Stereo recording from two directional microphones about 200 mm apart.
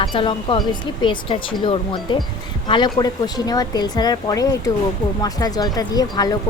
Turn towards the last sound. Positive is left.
turn(degrees=20)  # may be behind; listen again after turning